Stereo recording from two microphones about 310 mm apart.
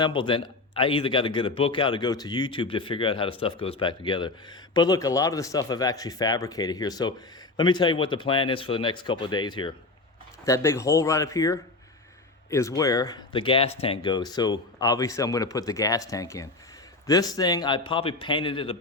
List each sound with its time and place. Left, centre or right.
0.0 s speech: centre